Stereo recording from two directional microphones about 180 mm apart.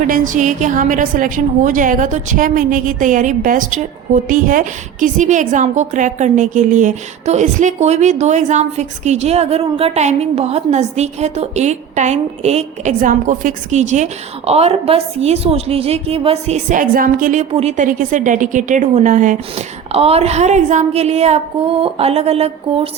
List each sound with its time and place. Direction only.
0.1 s a woman's voice: 45° right (ahead or behind)
17.5 s a woman's voice: 35° right (ahead or behind)